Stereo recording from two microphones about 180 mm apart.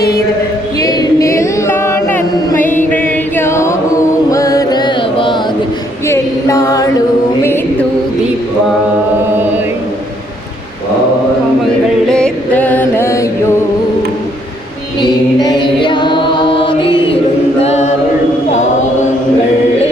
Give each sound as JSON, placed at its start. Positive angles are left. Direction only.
{"t": 0.8, "sound": "choir", "side_deg": 20}
{"t": 2.9, "sound": "music", "side_deg": 10}
{"t": 6.1, "sound": "music", "side_deg": 15}
{"t": 12.1, "sound": "music", "side_deg": 5}
{"t": 15.0, "sound": "a capella", "side_deg": 25}
{"t": 17.6, "sound": "a capella", "side_deg": 40}